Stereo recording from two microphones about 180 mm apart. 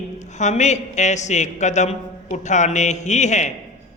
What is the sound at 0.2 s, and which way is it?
A man's voice, 40° left (ahead or behind).